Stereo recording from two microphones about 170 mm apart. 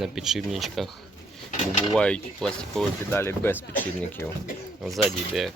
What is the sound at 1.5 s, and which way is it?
Dishes, 45° left (ahead or behind).